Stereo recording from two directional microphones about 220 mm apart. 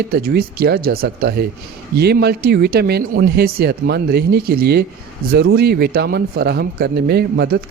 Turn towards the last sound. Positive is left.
turn(degrees=-45)  # may be behind; listen again after turning